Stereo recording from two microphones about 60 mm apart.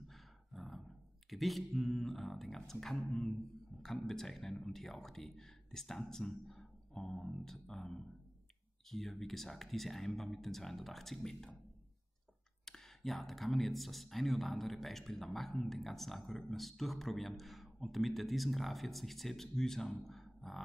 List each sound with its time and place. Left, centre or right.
0.1 s roar: centre
1.3 s speech: centre
3.1 s a sound: centre
3.8 s speech: centre
12.6 s speech: centre
20.1 s a sound: centre